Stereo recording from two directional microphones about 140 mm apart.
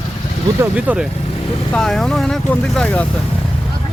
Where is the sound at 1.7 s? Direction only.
5° left (ahead or behind).